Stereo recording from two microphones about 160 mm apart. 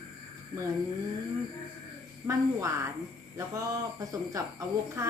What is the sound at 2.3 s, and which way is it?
A child's voice, 20° right (ahead or behind).